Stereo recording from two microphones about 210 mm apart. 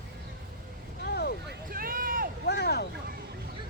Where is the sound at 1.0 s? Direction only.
50° left (ahead or behind).